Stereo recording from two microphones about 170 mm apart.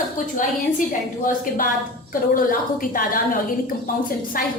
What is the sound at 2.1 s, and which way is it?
A woman's voice, 55° left (ahead or behind).